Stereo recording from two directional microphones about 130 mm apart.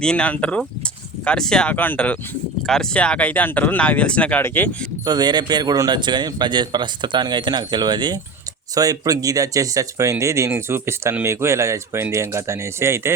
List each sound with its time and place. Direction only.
0.0 s speech: 5° left (ahead or behind)
5.0 s speech: 30° right (ahead or behind)